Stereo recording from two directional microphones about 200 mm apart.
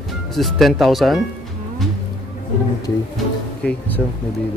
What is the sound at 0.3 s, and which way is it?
Speech, centre (ahead or behind).